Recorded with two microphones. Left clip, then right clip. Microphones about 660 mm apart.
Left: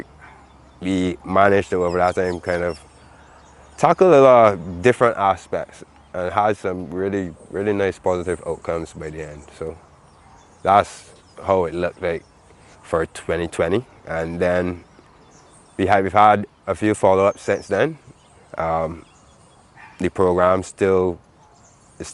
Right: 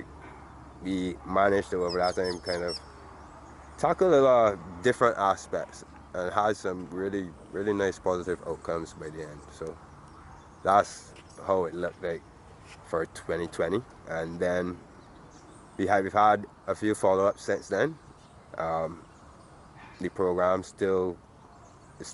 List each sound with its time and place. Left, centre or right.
0.9 s speech: left
3.8 s speech: left
15.8 s speech: left
20.0 s speech: left